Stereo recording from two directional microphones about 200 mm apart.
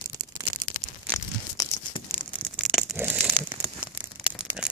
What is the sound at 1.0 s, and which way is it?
Tearing, 15° left (ahead or behind).